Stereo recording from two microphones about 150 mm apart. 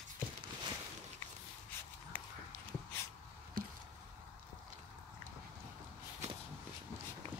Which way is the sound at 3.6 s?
70° right (ahead or behind).